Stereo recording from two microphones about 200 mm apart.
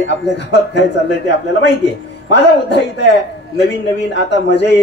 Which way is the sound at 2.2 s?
60° left (ahead or behind).